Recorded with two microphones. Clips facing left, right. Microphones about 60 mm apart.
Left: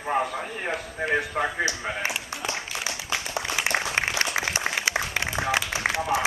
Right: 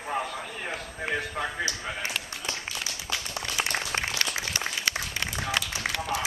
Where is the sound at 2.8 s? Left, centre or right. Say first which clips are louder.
Left 4 dB; left.